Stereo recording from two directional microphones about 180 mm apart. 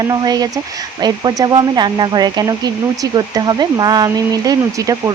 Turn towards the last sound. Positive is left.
turn(degrees=-20)  # may be behind; listen again after turning